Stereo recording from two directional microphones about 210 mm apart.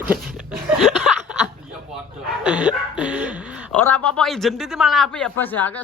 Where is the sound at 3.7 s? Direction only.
5° left (ahead or behind).